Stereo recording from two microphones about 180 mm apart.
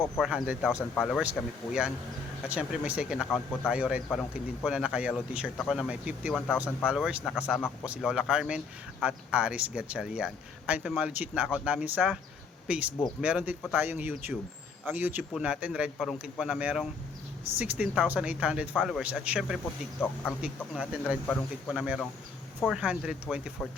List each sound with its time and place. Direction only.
0.0 s speech: centre (ahead or behind)
0.7 s speech: 15° left (ahead or behind)
1.2 s speech: 5° right (ahead or behind)
3.2 s speech: 10° left (ahead or behind)
3.7 s speech: 5° right (ahead or behind)